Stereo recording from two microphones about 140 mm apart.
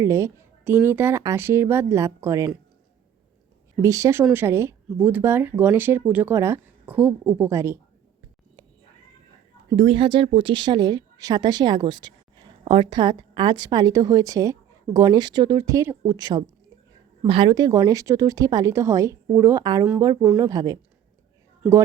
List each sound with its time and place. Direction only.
0.0 s a woman's voice: 20° right (ahead or behind)
3.8 s a woman's voice: 20° right (ahead or behind)
9.7 s a woman's voice: 40° right (ahead or behind)